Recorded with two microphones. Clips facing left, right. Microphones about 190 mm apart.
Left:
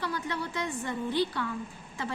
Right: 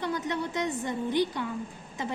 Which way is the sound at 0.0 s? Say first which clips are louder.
Right 3 dB; 20° right (ahead or behind).